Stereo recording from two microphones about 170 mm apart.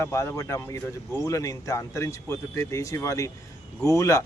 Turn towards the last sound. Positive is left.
turn(degrees=20)  # may be behind; listen again after turning